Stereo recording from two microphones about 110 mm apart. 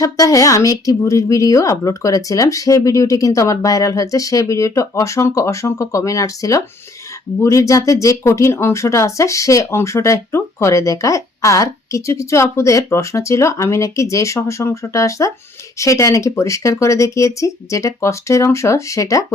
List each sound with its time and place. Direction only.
0.0 s a woman's voice: 30° left (ahead or behind)